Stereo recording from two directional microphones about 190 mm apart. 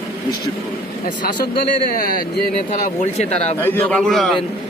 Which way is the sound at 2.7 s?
40° left (ahead or behind).